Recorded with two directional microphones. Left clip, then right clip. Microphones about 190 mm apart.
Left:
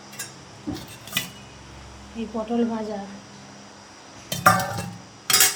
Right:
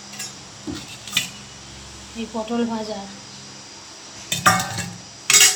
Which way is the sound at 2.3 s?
5° right (ahead or behind).